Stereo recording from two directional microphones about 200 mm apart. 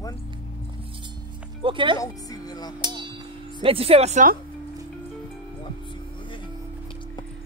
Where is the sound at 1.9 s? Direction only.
20° left (ahead or behind).